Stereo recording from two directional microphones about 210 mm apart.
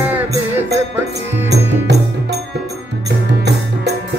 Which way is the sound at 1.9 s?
55° right (ahead or behind).